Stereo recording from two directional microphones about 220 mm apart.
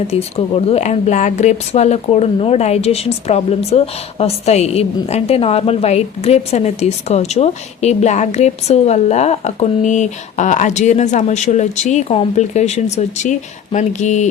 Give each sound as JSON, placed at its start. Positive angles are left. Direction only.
{"t": 0.1, "sound": "speech", "side_deg": 30}